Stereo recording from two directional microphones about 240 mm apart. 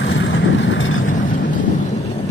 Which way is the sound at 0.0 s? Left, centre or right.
Left.